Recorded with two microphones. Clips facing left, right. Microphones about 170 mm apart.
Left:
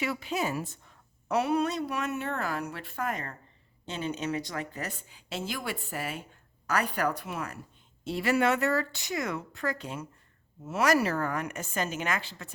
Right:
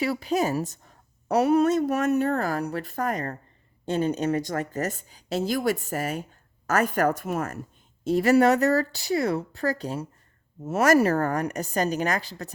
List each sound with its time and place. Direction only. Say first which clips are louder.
0.0 s a woman's voice: right 6 dB; 35° right (ahead or behind)